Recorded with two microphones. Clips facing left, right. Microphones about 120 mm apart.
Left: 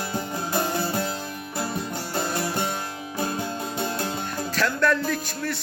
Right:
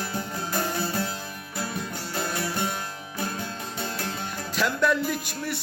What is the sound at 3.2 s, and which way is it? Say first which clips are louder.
Music: left 4 dB; 20° left (ahead or behind).